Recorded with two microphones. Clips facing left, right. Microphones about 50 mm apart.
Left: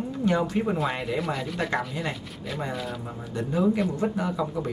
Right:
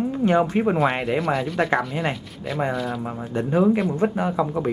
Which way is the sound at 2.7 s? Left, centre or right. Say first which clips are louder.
Right 6 dB; centre.